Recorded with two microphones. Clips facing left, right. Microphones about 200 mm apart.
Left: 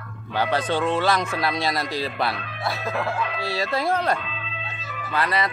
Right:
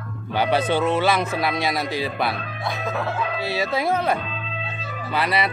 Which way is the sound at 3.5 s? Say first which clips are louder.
Right 1 dB; centre (ahead or behind).